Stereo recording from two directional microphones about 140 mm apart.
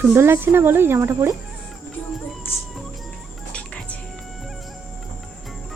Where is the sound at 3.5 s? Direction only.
10° left (ahead or behind).